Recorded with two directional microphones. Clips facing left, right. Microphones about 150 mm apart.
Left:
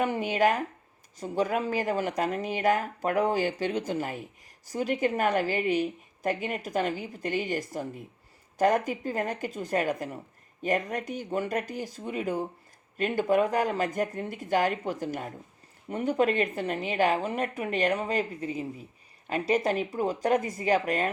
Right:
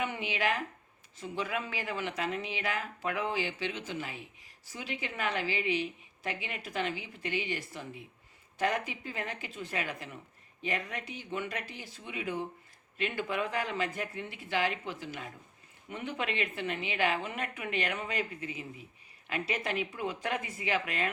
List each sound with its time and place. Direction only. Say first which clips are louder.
0.0 s a woman's voice: left 8 dB; 40° left (ahead or behind)